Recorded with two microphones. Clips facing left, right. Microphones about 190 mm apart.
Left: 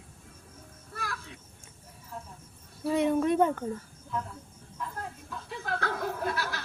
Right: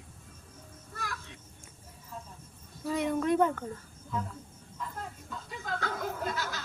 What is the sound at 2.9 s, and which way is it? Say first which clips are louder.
Speech: left 3 dB; 25° left (ahead or behind).